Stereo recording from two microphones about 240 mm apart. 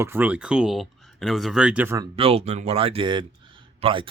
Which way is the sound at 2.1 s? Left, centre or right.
Right.